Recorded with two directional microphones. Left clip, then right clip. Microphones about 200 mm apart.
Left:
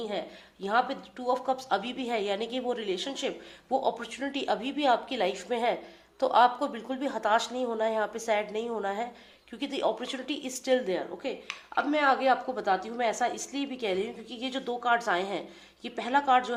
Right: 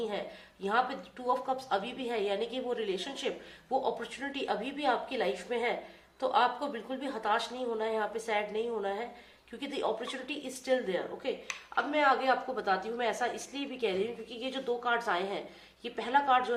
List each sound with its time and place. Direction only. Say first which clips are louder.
0.6 s a woman's voice: left 3 dB; 40° left (ahead or behind)